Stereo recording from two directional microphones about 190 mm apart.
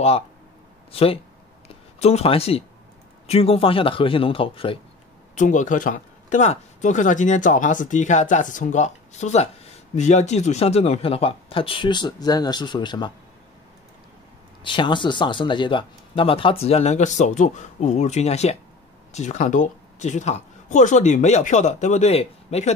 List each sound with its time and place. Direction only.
0.9 s speech: 30° left (ahead or behind)
5.3 s speech: 40° left (ahead or behind); by 13.1 s 25° left (ahead or behind)
14.6 s speech: 25° left (ahead or behind)